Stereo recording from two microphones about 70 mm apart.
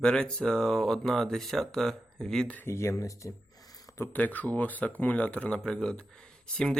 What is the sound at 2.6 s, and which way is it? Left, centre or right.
Speech, left.